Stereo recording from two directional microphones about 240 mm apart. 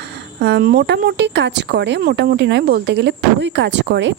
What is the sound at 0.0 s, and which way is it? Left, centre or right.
Speech, right.